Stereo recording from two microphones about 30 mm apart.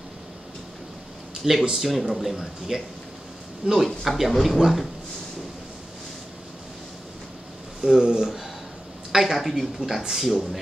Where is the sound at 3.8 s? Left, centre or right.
Centre.